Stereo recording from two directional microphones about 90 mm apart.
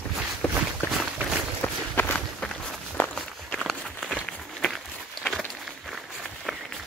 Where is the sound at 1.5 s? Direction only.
25° left (ahead or behind).